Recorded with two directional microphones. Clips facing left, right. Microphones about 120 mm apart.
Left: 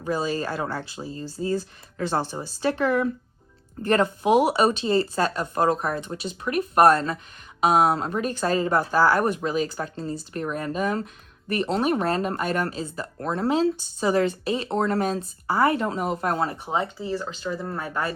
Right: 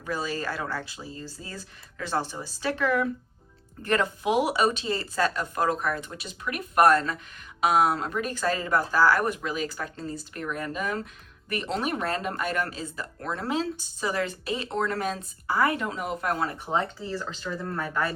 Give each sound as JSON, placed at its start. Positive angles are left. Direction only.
{"t": 0.0, "sound": "speech", "side_deg": 25}
{"t": 16.6, "sound": "speech", "side_deg": 15}